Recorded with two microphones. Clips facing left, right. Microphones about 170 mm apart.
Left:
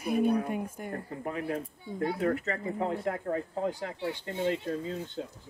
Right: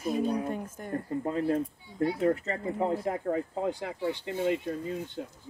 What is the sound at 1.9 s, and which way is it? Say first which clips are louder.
Speech: left 6 dB; 50° left (ahead or behind).